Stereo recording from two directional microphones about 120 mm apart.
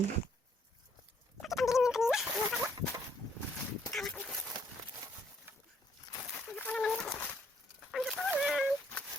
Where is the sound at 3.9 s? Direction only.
Centre (ahead or behind).